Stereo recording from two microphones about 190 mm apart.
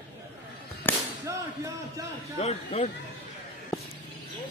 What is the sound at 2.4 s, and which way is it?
Speech, 35° left (ahead or behind).